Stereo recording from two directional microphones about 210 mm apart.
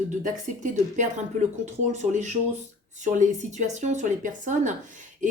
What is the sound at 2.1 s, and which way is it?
A woman's voice, 35° right (ahead or behind).